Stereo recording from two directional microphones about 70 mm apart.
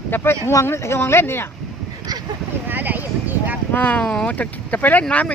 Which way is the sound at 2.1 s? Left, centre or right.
Right.